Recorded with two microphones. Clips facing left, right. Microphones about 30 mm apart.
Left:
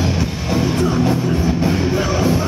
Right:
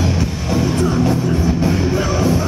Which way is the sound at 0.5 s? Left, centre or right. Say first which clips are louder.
Even; centre.